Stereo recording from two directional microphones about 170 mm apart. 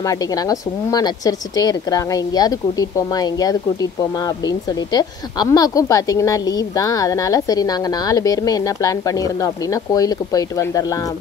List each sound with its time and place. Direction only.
0.0 s a woman's voice: 20° left (ahead or behind)